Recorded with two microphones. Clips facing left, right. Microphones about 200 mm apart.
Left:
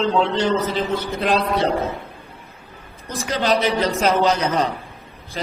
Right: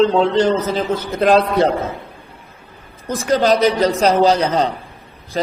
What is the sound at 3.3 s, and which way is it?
A man's voice, 40° right (ahead or behind).